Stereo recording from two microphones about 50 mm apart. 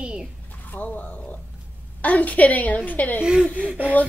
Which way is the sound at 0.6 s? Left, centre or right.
Left.